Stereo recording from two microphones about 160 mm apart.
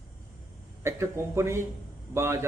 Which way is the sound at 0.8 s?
15° right (ahead or behind).